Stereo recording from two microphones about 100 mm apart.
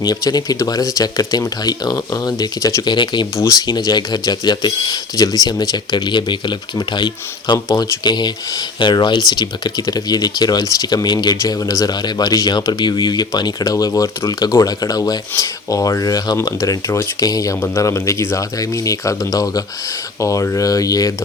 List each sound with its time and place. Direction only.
0.0 s speech: 40° left (ahead or behind)
2.8 s speech: 50° left (ahead or behind)
3.3 s speech: 30° left (ahead or behind)
3.7 s speech: 40° left (ahead or behind)